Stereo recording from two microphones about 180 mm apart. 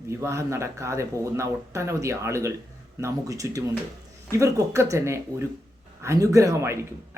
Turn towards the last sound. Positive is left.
turn(degrees=-15)  # may be behind; listen again after turning